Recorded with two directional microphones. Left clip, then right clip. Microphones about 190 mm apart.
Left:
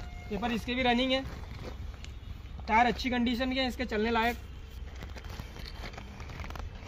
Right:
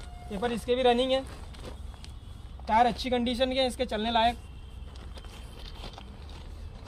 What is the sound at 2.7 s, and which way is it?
Speech, 15° right (ahead or behind).